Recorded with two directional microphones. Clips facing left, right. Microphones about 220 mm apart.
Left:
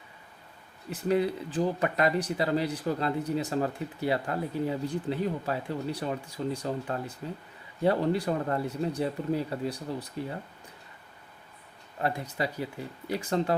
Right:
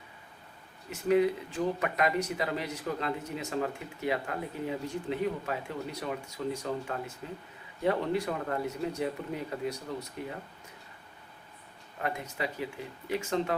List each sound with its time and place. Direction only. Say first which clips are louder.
0.9 s speech: right 1 dB; 35° left (ahead or behind)
11.9 s speech: left 4 dB; 35° left (ahead or behind)